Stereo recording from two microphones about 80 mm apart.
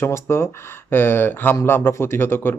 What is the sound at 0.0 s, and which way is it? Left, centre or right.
Speech, left.